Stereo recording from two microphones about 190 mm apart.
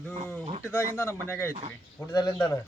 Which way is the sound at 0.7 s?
10° left (ahead or behind).